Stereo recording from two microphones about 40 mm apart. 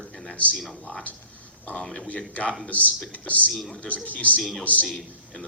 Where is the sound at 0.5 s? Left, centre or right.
Centre.